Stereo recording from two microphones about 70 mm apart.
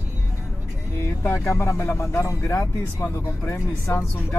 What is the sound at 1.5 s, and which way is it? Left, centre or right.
Speech, left.